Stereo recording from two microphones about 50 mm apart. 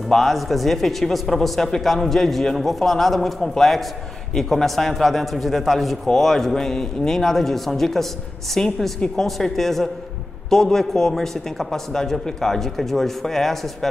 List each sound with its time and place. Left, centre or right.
0.1 s speech: centre
8.6 s speech: centre
9.2 s speech: centre